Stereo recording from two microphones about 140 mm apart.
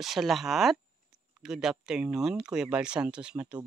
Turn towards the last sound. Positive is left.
turn(degrees=-10)  # may be behind; listen again after turning